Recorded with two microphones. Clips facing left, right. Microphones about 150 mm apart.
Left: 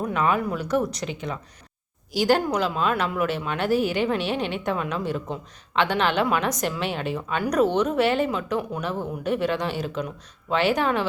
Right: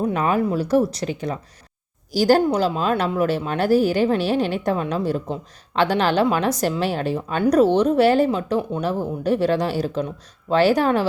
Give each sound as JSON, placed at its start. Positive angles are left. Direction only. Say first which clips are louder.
{"t": 0.1, "sound": "speech", "louder": "right 3 dB", "side_deg": -35}